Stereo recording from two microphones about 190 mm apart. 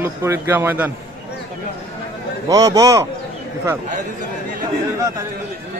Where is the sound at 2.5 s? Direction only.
15° right (ahead or behind).